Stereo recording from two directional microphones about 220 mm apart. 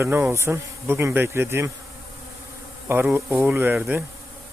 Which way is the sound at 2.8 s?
10° right (ahead or behind).